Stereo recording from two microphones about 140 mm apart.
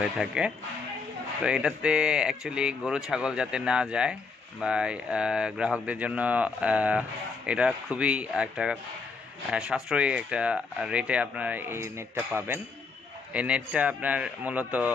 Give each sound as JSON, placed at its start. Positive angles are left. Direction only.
{"t": 0.0, "sound": "speech", "side_deg": -5}
{"t": 13.3, "sound": "speech", "side_deg": -10}